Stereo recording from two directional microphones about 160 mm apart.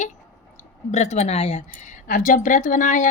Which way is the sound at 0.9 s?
45° left (ahead or behind).